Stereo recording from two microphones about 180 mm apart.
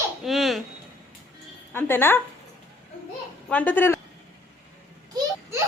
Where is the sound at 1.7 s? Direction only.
10° left (ahead or behind).